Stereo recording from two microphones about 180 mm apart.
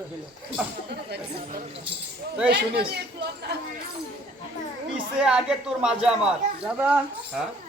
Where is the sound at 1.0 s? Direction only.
60° right (ahead or behind).